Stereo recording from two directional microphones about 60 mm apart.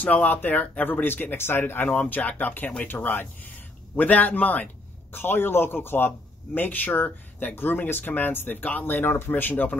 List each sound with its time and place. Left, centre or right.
0.0 s a man's voice: left